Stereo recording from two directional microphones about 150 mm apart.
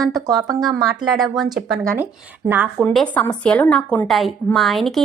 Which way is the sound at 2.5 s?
15° right (ahead or behind).